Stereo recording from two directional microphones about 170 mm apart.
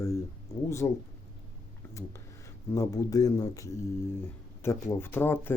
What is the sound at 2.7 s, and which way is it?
Speech, 20° left (ahead or behind).